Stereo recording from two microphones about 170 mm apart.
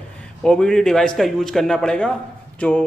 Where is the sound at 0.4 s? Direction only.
5° left (ahead or behind).